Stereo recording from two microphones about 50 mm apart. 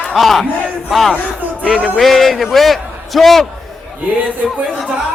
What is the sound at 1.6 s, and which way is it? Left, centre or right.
A man's voice, centre.